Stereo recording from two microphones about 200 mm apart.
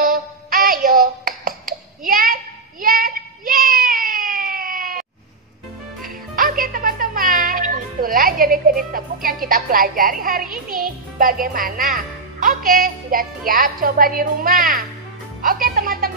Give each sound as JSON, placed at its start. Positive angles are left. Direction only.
{"t": 0.0, "sound": "music", "side_deg": -45}
{"t": 2.8, "sound": "a sound", "side_deg": -45}
{"t": 6.0, "sound": "music", "side_deg": -45}
{"t": 13.5, "sound": "speech", "side_deg": -45}
{"t": 15.4, "sound": "music", "side_deg": -45}